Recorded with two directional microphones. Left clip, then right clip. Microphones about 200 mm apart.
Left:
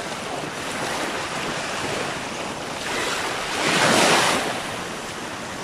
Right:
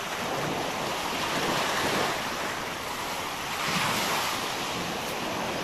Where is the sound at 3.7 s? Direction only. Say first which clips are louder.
Left 12 dB; 50° left (ahead or behind).